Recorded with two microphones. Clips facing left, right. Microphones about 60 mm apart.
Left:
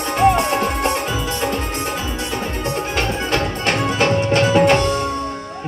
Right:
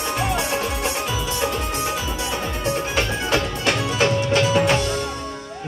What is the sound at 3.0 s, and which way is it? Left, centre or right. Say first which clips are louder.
Music: left 3 dB; left.